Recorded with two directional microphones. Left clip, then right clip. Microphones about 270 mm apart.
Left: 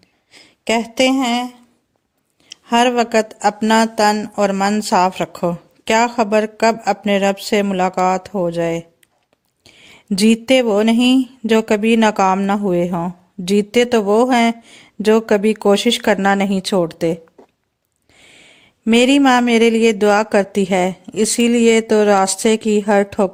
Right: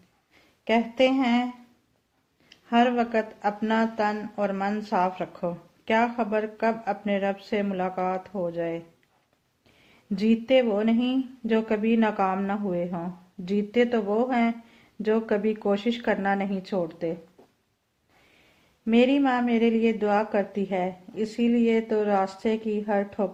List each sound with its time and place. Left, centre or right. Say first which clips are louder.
0.3 s speech: left 6 dB; left
2.5 s speech: left 8 dB; left
18.9 s speech: left 10 dB; left